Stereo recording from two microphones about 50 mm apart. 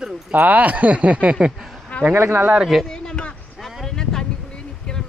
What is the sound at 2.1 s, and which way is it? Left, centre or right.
Speech, right.